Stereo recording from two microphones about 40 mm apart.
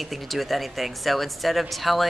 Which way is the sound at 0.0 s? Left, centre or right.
Centre.